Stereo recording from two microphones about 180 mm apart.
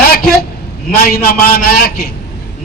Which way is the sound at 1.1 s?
55° left (ahead or behind).